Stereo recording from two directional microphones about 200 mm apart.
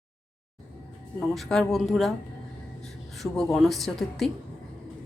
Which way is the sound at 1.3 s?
Centre (ahead or behind).